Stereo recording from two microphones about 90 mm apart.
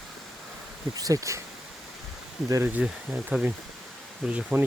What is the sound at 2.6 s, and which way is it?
Speech, 15° right (ahead or behind).